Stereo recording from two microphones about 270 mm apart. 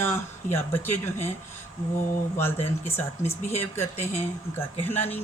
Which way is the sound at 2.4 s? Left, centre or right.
Centre.